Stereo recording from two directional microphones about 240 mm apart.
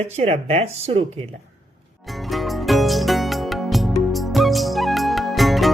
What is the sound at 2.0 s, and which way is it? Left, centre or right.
Music, centre.